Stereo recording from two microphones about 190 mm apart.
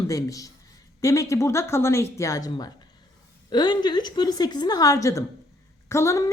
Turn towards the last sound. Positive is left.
turn(degrees=15)  # may be behind; listen again after turning